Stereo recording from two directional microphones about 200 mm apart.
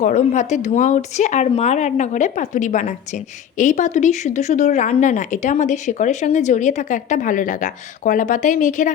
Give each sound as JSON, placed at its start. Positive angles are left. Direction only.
{"t": 0.0, "sound": "speech", "side_deg": 35}